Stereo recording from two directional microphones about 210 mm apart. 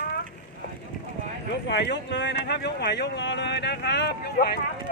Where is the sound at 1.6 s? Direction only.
55° left (ahead or behind).